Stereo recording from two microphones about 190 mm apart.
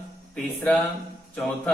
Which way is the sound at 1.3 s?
Centre (ahead or behind).